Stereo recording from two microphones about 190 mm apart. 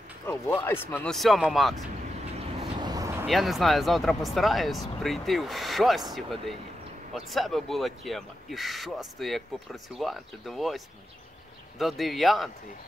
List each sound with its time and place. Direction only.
0.3 s speech: 10° left (ahead or behind)
2.3 s vehicle: 30° right (ahead or behind)
2.9 s a sound: 15° right (ahead or behind)
3.3 s speech: centre (ahead or behind)
7.2 s speech: centre (ahead or behind)
11.8 s speech: centre (ahead or behind)